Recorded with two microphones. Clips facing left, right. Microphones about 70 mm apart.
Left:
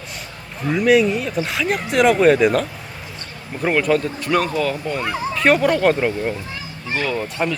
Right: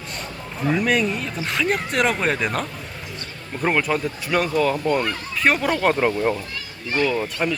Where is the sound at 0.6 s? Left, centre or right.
Centre.